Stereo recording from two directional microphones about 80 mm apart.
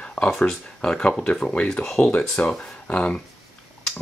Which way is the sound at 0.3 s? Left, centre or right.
Centre.